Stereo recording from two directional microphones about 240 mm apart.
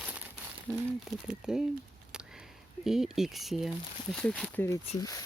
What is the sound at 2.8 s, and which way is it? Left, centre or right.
Speech, centre.